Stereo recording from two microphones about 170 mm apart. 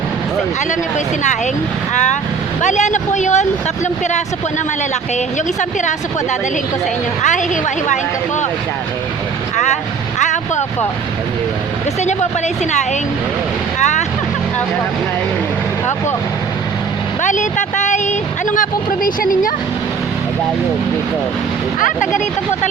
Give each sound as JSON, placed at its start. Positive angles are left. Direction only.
{"t": 2.6, "sound": "speech", "side_deg": 45}
{"t": 7.2, "sound": "speech", "side_deg": 45}
{"t": 10.2, "sound": "vehicle", "side_deg": 45}
{"t": 13.7, "sound": "speech", "side_deg": 45}
{"t": 17.2, "sound": "speech", "side_deg": 45}
{"t": 21.8, "sound": "speech", "side_deg": 50}